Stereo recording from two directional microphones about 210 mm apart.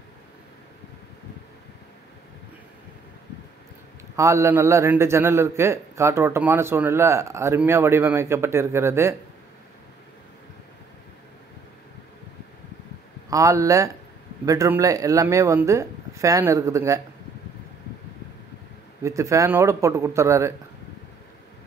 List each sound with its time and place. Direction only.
4.2 s a man's voice: 15° right (ahead or behind)
13.3 s a man's voice: 15° right (ahead or behind)
19.0 s a man's voice: 15° right (ahead or behind)